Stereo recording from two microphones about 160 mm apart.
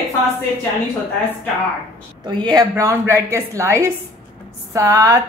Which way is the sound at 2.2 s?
30° right (ahead or behind).